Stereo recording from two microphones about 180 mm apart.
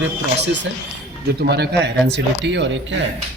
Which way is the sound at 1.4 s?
70° right (ahead or behind).